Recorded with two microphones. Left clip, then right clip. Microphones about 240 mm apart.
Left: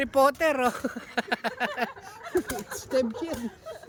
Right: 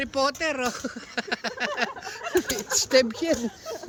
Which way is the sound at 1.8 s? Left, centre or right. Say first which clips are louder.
Right 3 dB; centre.